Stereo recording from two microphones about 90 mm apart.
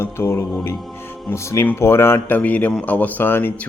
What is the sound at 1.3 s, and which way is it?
A man's voice, 35° left (ahead or behind).